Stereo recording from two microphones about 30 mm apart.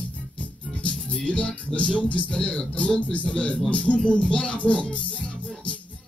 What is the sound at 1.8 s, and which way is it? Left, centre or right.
Speech, left.